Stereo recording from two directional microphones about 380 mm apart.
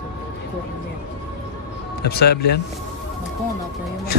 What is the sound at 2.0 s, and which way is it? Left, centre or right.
Speech, left.